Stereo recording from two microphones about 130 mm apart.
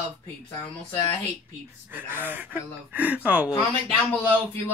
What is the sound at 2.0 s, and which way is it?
Speech, 15° right (ahead or behind).